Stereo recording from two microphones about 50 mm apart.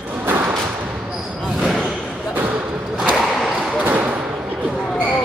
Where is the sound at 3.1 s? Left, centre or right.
Centre.